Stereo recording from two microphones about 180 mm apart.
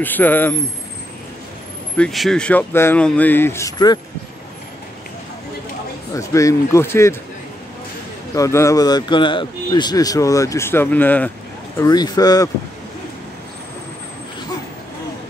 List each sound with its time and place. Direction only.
0.0 s speech: 10° left (ahead or behind)
2.0 s speech: centre (ahead or behind); by 4.0 s 20° left (ahead or behind)
6.1 s speech: 15° left (ahead or behind)
8.4 s speech: 15° left (ahead or behind)
11.8 s speech: 20° left (ahead or behind)